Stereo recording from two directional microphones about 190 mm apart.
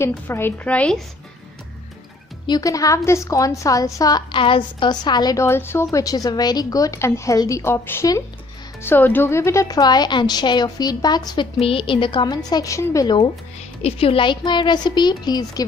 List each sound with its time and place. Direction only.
0.0 s a woman's voice: 10° left (ahead or behind)
2.4 s a woman's voice: 20° left (ahead or behind)